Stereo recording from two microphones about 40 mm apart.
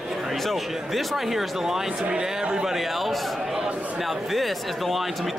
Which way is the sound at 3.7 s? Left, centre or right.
Right.